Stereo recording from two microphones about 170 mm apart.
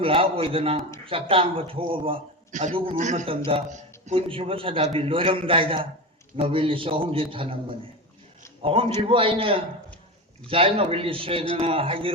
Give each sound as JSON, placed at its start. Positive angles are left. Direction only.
{"t": 0.0, "sound": "a man's voice", "side_deg": -30}
{"t": 2.5, "sound": "a man's voice", "side_deg": -45}
{"t": 3.2, "sound": "a man's voice", "side_deg": -30}